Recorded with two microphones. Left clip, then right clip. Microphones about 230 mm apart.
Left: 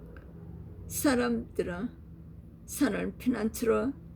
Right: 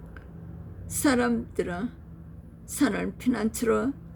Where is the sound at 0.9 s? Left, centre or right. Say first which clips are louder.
Right 3 dB; centre.